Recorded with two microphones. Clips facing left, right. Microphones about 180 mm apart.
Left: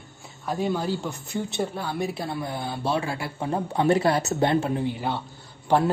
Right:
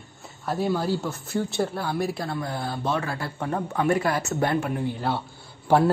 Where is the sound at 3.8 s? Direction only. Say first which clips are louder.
Left 3 dB; 30° left (ahead or behind).